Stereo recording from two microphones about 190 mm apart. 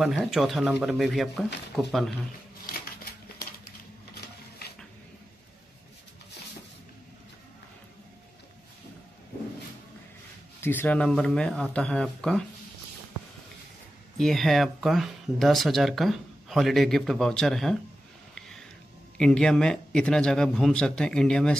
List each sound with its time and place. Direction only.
0.0 s speech: centre (ahead or behind)
4.1 s printer: 55° left (ahead or behind)
10.6 s speech: 10° left (ahead or behind)
14.1 s speech: centre (ahead or behind)
19.1 s speech: 5° left (ahead or behind)